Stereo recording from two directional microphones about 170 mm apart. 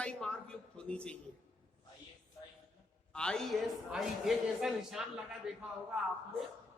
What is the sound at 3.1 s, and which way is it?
Speech, 5° left (ahead or behind).